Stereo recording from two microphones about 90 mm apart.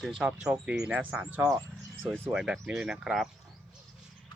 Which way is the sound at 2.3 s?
5° right (ahead or behind).